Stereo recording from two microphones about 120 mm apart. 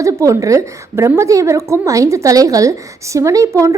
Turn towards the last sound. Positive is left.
turn(degrees=-25)  # may be behind; listen again after turning